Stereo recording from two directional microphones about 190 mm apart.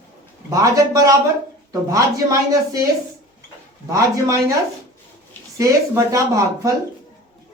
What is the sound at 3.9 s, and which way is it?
Speech, 15° right (ahead or behind).